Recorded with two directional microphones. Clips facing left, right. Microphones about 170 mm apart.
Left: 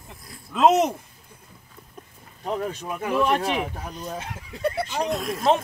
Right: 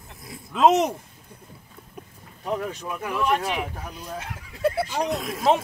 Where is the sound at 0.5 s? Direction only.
5° left (ahead or behind).